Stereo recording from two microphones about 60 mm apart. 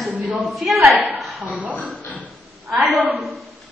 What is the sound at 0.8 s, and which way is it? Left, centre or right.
Speech, right.